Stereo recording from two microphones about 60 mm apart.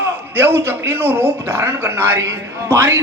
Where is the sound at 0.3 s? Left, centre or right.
Right.